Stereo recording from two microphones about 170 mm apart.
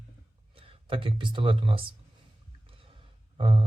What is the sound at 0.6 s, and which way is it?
Speech, 30° right (ahead or behind).